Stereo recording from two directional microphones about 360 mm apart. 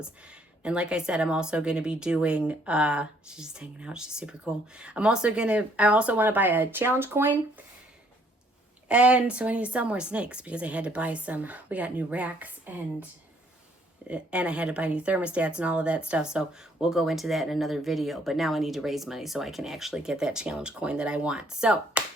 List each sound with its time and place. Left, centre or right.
0.6 s speech: centre
8.9 s speech: centre
14.1 s speech: centre